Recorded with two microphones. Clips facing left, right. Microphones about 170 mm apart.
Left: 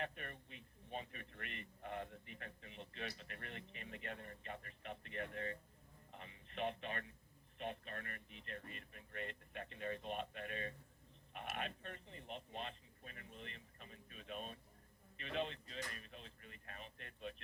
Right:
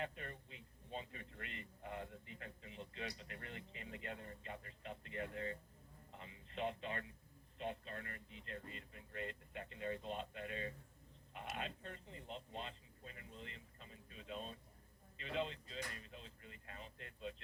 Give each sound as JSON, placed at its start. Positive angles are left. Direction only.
{"t": 0.0, "sound": "speech", "side_deg": -25}